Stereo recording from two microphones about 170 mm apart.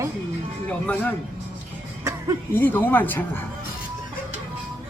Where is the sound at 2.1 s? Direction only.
15° right (ahead or behind).